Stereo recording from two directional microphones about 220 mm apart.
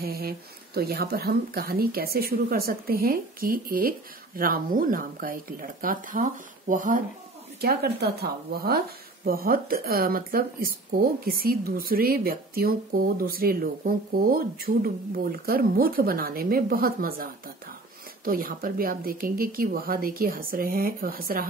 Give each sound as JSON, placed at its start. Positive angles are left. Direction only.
{"t": 0.0, "sound": "speech", "side_deg": -45}